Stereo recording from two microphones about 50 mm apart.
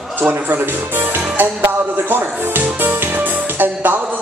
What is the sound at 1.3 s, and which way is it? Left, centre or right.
Music, right.